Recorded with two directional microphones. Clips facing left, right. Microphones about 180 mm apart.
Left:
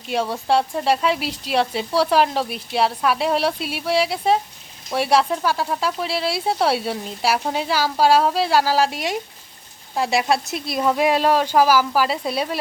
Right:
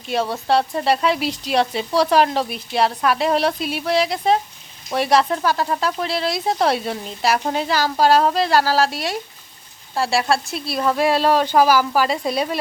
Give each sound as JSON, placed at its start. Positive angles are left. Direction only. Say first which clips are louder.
{"t": 0.1, "sound": "speech", "louder": "right 1 dB", "side_deg": 10}
{"t": 11.3, "sound": "speech", "louder": "right 2 dB", "side_deg": 5}